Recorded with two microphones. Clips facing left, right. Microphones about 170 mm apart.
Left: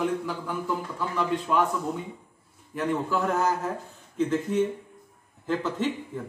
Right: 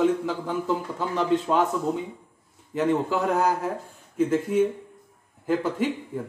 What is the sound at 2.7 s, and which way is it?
Speech, 20° right (ahead or behind).